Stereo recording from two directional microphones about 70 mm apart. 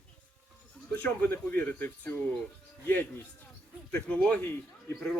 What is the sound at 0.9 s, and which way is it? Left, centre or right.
Speech, left.